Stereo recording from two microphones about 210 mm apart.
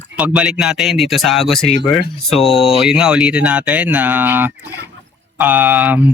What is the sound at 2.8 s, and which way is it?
Speech, 5° right (ahead or behind).